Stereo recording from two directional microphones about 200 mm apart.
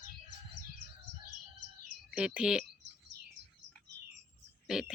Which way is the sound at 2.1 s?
5° right (ahead or behind).